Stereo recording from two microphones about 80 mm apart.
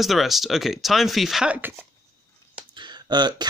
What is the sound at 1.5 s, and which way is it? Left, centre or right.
Speech, right.